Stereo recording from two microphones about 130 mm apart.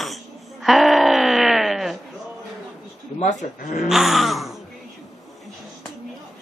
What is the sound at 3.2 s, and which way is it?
Speech, 65° left (ahead or behind).